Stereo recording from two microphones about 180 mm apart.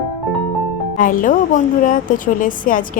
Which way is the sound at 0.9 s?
50° left (ahead or behind).